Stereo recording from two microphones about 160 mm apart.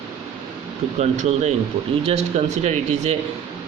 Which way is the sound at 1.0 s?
45° right (ahead or behind).